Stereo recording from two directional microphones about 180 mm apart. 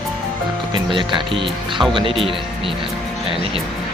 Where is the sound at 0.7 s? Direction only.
25° right (ahead or behind).